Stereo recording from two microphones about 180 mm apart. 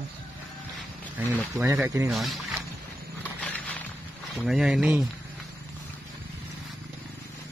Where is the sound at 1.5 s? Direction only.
15° right (ahead or behind).